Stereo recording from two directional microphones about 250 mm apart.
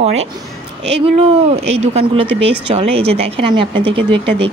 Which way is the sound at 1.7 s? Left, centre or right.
Right.